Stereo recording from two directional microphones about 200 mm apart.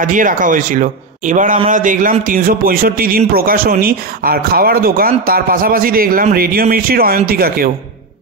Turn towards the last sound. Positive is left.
turn(degrees=-50)  # may be behind; listen again after turning